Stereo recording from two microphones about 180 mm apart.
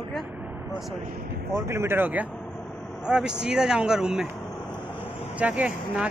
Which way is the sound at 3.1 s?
5° right (ahead or behind).